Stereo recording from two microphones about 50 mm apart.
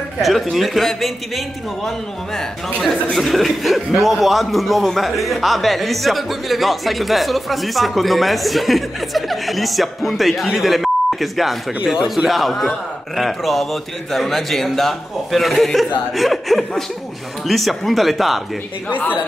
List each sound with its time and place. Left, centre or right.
0.2 s speech: centre
11.8 s speech: centre
12.3 s speech: centre
18.9 s a woman's voice: left